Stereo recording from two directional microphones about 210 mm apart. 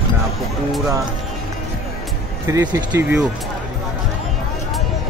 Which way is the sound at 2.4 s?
15° right (ahead or behind).